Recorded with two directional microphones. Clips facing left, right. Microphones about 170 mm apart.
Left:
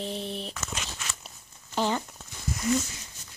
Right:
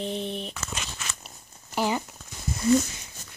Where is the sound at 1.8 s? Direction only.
10° right (ahead or behind).